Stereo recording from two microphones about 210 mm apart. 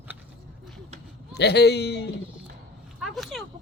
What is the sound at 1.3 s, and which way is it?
Speech, 55° left (ahead or behind).